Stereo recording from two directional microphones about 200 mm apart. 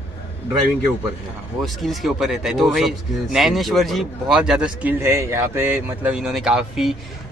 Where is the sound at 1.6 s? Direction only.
Centre (ahead or behind).